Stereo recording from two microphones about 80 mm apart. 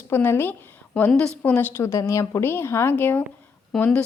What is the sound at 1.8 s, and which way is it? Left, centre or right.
A woman's voice, left.